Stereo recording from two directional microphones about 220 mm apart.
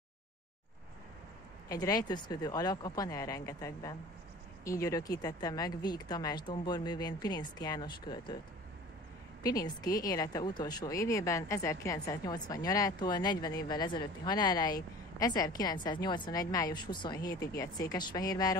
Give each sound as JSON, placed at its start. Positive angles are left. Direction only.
{"t": 1.7, "sound": "speech", "side_deg": 15}
{"t": 9.4, "sound": "speech", "side_deg": 15}